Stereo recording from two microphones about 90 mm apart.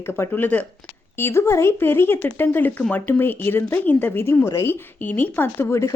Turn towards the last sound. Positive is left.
turn(degrees=30)  # may be behind; listen again after turning